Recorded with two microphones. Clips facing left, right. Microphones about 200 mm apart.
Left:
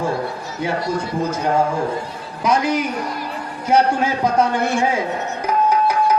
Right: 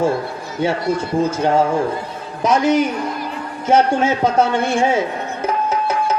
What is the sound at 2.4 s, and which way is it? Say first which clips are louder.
A woman's voice: right 4 dB; 25° right (ahead or behind).